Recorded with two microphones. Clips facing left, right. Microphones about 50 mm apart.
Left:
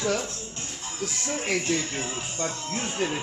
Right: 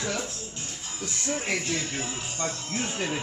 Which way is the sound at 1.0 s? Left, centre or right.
Centre.